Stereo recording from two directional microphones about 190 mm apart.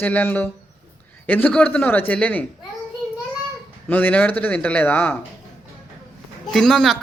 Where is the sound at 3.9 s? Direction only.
10° left (ahead or behind).